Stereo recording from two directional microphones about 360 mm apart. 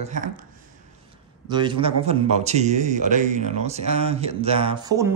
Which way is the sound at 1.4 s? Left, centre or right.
Centre.